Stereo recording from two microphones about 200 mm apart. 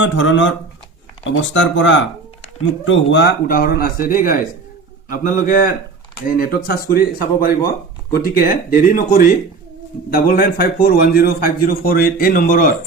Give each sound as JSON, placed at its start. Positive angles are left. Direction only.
{"t": 0.0, "sound": "a man's voice", "side_deg": 70}
{"t": 8.7, "sound": "a man's voice", "side_deg": 45}